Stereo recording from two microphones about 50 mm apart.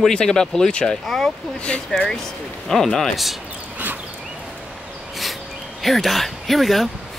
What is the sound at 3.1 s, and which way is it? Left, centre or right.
Speech, centre.